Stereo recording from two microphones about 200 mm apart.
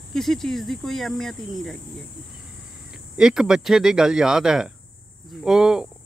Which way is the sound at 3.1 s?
5° right (ahead or behind).